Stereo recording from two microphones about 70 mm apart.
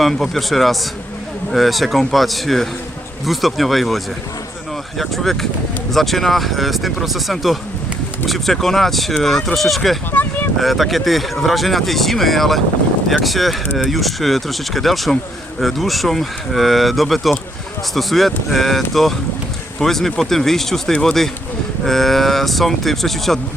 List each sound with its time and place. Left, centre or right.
0.0 s speech: centre
10.1 s a sound: left
10.6 s speech: centre